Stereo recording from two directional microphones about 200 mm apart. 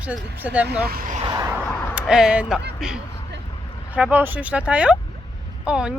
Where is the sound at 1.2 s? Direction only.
20° right (ahead or behind).